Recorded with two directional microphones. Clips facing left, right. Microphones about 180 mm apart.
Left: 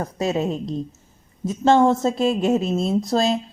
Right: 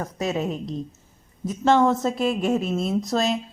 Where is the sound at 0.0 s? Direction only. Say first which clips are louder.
Left 3 dB; 30° left (ahead or behind).